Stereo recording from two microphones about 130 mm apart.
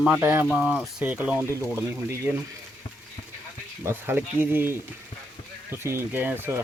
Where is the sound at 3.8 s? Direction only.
15° right (ahead or behind).